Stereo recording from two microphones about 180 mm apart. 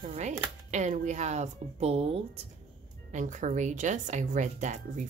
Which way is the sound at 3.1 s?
45° right (ahead or behind).